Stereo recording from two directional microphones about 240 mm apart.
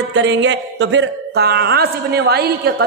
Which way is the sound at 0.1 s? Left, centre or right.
Right.